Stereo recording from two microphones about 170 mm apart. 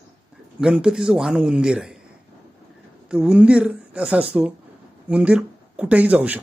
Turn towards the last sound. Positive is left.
turn(degrees=-10)  # may be behind; listen again after turning